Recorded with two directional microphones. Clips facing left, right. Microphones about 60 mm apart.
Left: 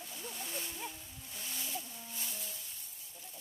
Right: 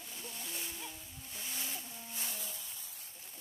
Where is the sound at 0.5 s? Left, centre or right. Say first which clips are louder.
Left 2 dB; centre.